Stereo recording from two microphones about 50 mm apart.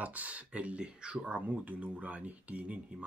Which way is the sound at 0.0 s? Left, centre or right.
Right.